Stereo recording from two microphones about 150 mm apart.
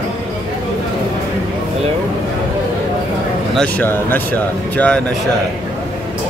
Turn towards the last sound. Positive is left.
turn(degrees=10)  # may be behind; listen again after turning